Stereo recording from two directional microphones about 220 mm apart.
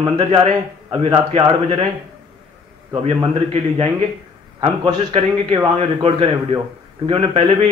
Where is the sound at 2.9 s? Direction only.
25° right (ahead or behind).